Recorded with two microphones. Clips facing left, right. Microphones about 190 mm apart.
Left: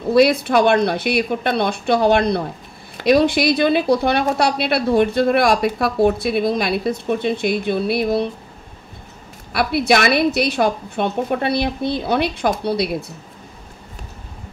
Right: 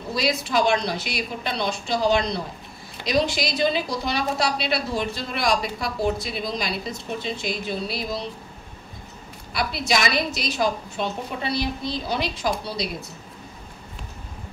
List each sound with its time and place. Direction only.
0.1 s a woman's voice: 60° left (ahead or behind)
9.5 s a woman's voice: 60° left (ahead or behind)